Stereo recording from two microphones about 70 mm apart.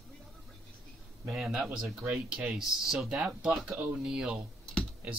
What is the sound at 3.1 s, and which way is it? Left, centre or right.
Speech, centre.